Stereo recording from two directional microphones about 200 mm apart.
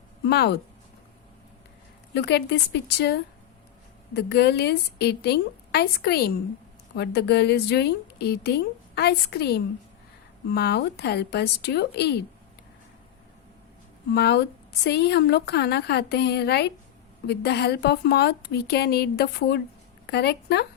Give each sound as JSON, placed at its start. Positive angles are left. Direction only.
{"t": 0.3, "sound": "a woman's voice", "side_deg": 55}
{"t": 2.1, "sound": "a woman's voice", "side_deg": 60}
{"t": 14.1, "sound": "a woman's voice", "side_deg": 55}